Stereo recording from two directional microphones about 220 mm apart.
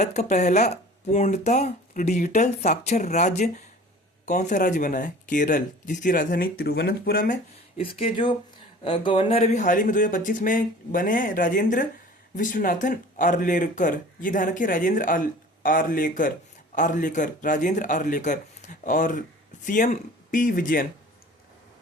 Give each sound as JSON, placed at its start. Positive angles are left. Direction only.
{"t": 0.0, "sound": "speech", "side_deg": 30}
{"t": 7.8, "sound": "speech", "side_deg": 25}